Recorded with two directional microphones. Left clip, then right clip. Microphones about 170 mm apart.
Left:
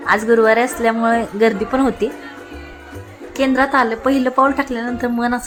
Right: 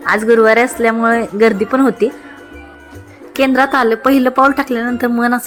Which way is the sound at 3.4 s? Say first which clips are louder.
Right 3 dB; 15° right (ahead or behind).